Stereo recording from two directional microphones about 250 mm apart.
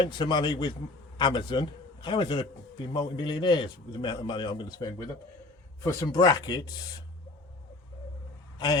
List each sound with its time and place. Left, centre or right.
0.0 s a man's voice: centre
8.5 s speech: centre